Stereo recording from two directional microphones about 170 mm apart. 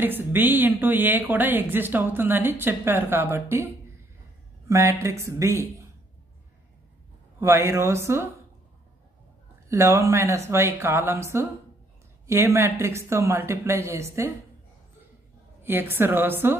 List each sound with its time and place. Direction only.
0.0 s a woman's voice: 10° right (ahead or behind)
7.3 s a woman's voice: 15° right (ahead or behind)
9.7 s a woman's voice: 15° right (ahead or behind)
15.6 s a woman's voice: 10° right (ahead or behind)